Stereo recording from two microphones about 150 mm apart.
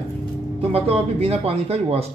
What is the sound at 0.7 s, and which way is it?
Speech, 40° right (ahead or behind).